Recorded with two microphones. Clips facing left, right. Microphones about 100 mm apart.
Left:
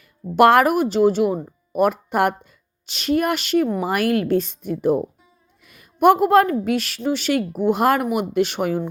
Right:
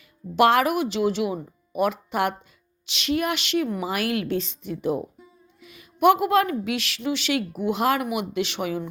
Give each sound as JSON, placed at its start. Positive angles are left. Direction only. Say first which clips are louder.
{"t": 0.3, "sound": "a woman's voice", "louder": "left 5 dB", "side_deg": 50}
{"t": 5.6, "sound": "a sound", "louder": "left 3 dB", "side_deg": 50}
{"t": 6.7, "sound": "a woman's voice", "louder": "left 5 dB", "side_deg": 45}